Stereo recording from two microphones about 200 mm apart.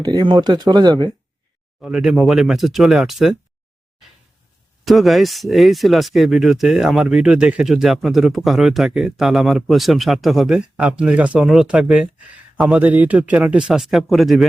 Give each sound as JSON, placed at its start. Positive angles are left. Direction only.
{"t": 0.0, "sound": "speech", "side_deg": -20}
{"t": 1.8, "sound": "speech", "side_deg": -5}
{"t": 4.9, "sound": "speech", "side_deg": 0}